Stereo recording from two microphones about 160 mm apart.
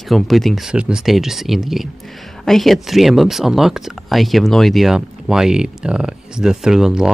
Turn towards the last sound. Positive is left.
turn(degrees=-5)  # may be behind; listen again after turning